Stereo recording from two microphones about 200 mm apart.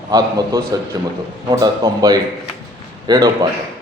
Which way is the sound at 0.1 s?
15° right (ahead or behind).